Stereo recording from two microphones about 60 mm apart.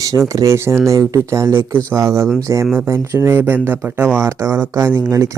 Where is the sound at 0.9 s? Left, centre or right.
Right.